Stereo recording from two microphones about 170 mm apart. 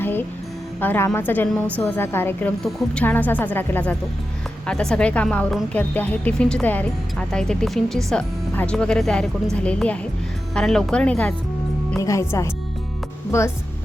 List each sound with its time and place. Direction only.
0.0 s music: 10° left (ahead or behind)
0.8 s a woman's voice: 10° left (ahead or behind)
2.6 s a woman's voice: centre (ahead or behind)
11.9 s a woman's voice: 15° left (ahead or behind)